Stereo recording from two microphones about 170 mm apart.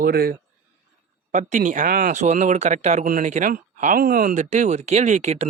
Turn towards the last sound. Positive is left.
turn(degrees=-45)  # may be behind; listen again after turning